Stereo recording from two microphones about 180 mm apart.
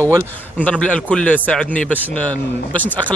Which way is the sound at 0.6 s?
5° left (ahead or behind).